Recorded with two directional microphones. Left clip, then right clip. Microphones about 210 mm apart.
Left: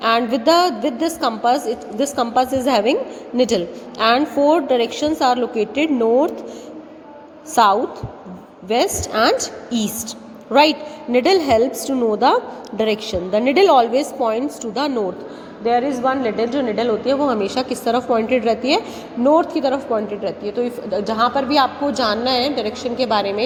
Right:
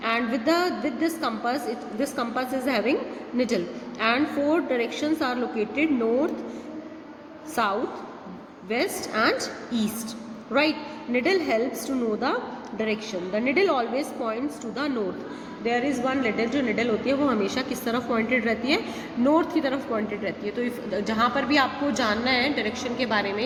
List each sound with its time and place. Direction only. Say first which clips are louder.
0.0 s a woman's voice: left 9 dB; 30° left (ahead or behind)
7.5 s a woman's voice: left 11 dB; 30° left (ahead or behind)
15.7 s a woman's voice: left 8 dB; centre (ahead or behind)
17.2 s a woman's voice: left 6 dB; 20° left (ahead or behind)
20.9 s a woman's voice: left 6 dB; 15° left (ahead or behind)